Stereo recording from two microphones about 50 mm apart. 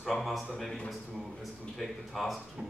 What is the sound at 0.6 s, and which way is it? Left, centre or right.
Speech, centre.